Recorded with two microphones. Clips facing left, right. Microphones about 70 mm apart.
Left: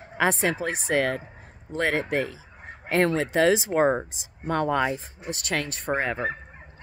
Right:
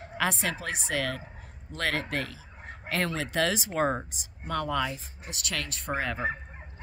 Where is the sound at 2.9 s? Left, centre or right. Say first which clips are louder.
Left 8 dB; left.